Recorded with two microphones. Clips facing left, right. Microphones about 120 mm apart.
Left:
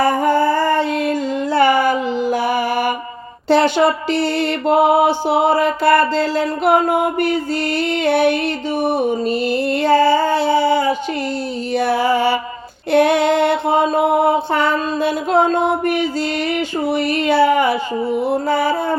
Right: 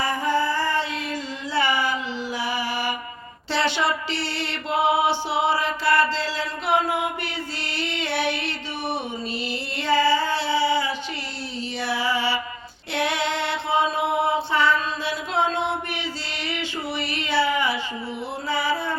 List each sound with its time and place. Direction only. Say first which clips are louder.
0.0 s music: left 8 dB; 50° left (ahead or behind)
3.5 s mantra: left 10 dB; 50° left (ahead or behind)
11.7 s music: left 10 dB; 50° left (ahead or behind)
12.9 s mantra: left 12 dB; 50° left (ahead or behind)
16.5 s a sound: left 10 dB; 45° left (ahead or behind)
18.2 s music: left 8 dB; 45° left (ahead or behind)